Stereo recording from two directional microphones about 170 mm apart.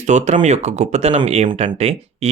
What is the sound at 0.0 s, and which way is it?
Speech, 45° right (ahead or behind).